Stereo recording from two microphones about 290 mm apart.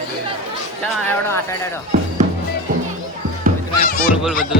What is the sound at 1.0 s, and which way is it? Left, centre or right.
Speech, centre.